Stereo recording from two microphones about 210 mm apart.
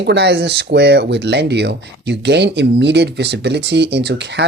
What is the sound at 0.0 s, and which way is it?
Speech, 55° right (ahead or behind).